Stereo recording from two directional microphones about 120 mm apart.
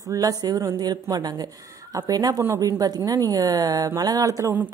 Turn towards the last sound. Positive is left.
turn(degrees=-25)  # may be behind; listen again after turning